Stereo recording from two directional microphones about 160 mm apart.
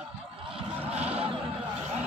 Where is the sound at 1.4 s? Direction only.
5° right (ahead or behind).